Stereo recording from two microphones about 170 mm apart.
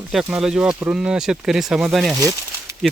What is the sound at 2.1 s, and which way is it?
Speech, 20° right (ahead or behind).